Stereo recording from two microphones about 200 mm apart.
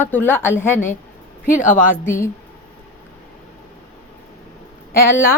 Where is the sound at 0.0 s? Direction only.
10° left (ahead or behind).